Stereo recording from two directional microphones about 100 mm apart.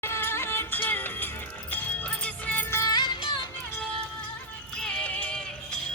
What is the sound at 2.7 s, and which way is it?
Music, 40° left (ahead or behind).